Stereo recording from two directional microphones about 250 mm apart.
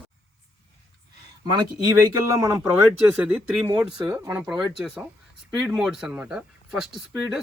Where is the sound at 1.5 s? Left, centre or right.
Centre.